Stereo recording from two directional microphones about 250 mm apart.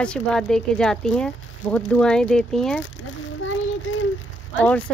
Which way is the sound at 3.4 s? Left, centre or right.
Left.